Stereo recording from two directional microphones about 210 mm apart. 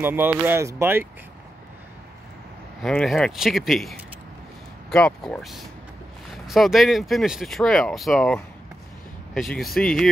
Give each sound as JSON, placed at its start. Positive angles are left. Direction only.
{"t": 0.0, "sound": "speech", "side_deg": -10}
{"t": 2.8, "sound": "speech", "side_deg": 0}